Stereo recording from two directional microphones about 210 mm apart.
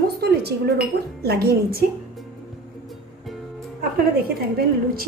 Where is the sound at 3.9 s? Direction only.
45° right (ahead or behind).